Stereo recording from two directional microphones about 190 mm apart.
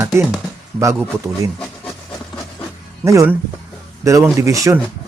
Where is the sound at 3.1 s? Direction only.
15° right (ahead or behind).